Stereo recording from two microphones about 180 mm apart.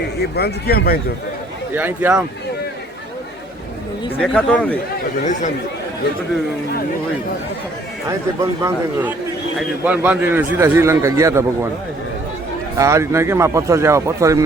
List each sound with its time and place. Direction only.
0.2 s speech: 65° left (ahead or behind)
1.7 s speech: 10° right (ahead or behind)
4.2 s speech: 5° left (ahead or behind)
5.2 s speech: 45° left (ahead or behind)
8.4 s speech: 15° right (ahead or behind)
12.7 s speech: 15° right (ahead or behind)